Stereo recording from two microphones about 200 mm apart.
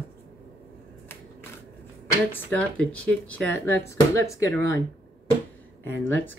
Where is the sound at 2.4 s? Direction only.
5° left (ahead or behind).